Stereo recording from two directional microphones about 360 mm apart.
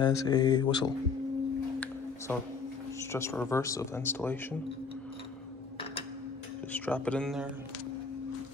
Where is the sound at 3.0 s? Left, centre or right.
Centre.